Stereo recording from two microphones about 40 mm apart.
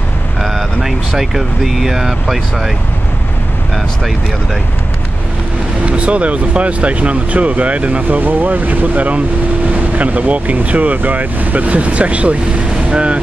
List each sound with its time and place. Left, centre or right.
0.4 s speech: centre
5.9 s speech: right
8.2 s speech: right